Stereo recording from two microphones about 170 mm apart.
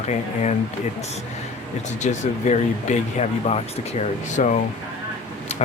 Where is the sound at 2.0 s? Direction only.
45° left (ahead or behind).